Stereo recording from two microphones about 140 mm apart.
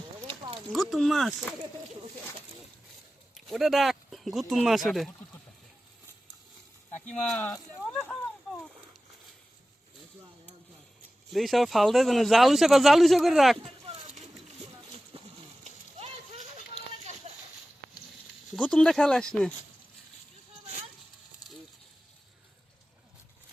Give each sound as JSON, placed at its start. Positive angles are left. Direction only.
{"t": 0.3, "sound": "clip-clop", "side_deg": -35}
{"t": 0.7, "sound": "speech", "side_deg": 0}
{"t": 3.3, "sound": "speech", "side_deg": 0}
{"t": 7.2, "sound": "speech", "side_deg": 5}
{"t": 8.4, "sound": "a sound", "side_deg": 0}
{"t": 11.3, "sound": "speech", "side_deg": 0}
{"t": 15.1, "sound": "a sound", "side_deg": -45}
{"t": 18.5, "sound": "speech", "side_deg": 5}